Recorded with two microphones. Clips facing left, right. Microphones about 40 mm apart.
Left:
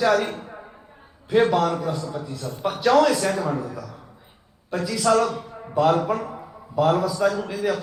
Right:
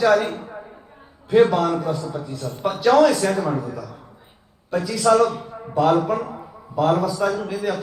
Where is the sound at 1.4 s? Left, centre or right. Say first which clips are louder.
Right 3 dB; centre.